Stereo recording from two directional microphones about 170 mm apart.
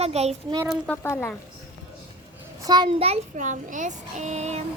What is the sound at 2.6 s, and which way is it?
Speech, 25° right (ahead or behind).